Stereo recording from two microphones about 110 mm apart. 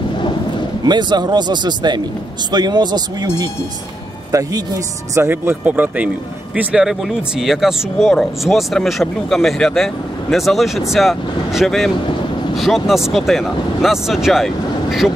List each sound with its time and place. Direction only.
0.8 s speech: 40° right (ahead or behind); by 15.1 s 5° right (ahead or behind)